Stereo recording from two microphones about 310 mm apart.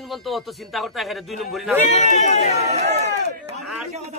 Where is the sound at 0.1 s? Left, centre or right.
Centre.